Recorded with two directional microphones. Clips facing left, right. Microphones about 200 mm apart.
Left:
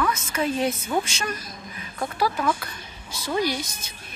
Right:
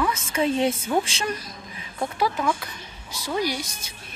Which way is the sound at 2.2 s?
15° right (ahead or behind).